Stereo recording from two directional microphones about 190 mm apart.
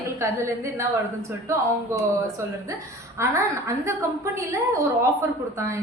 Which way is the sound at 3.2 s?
15° right (ahead or behind).